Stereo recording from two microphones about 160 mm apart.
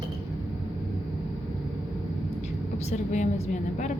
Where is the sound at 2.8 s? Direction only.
45° left (ahead or behind).